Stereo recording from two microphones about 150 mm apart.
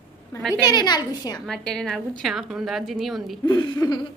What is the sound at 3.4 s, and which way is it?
Speech, 30° left (ahead or behind).